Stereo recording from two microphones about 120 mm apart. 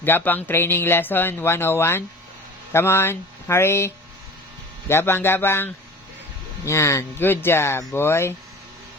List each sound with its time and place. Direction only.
0.0 s speech: 15° left (ahead or behind)